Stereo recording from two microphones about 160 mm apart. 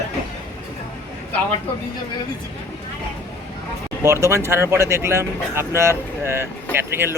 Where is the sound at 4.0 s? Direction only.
15° right (ahead or behind).